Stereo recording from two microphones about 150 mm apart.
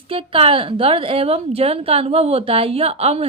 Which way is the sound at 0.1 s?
35° right (ahead or behind).